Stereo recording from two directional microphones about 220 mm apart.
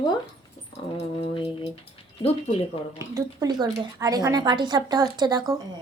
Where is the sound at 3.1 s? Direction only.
15° right (ahead or behind).